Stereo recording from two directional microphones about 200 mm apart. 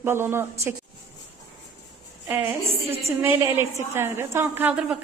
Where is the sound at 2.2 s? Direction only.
10° right (ahead or behind).